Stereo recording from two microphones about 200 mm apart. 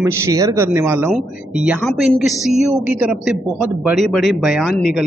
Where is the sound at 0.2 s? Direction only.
15° right (ahead or behind).